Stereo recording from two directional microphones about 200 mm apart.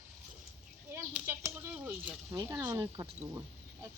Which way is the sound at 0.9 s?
15° right (ahead or behind).